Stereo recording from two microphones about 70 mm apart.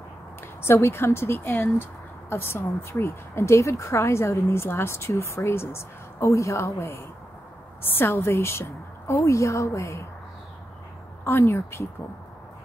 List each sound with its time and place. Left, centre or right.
0.6 s a woman's voice: left
11.2 s speech: left